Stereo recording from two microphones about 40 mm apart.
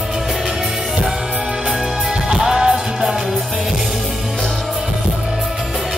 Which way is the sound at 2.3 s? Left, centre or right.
Centre.